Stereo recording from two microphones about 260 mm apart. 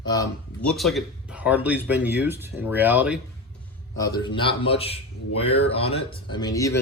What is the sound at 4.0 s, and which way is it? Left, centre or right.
Speech, centre.